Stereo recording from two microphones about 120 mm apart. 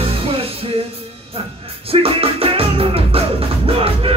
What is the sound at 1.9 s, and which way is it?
Music, 55° right (ahead or behind).